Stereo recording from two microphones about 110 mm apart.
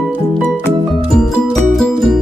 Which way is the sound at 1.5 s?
Centre (ahead or behind).